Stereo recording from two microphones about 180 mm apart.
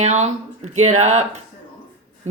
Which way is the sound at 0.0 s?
40° right (ahead or behind).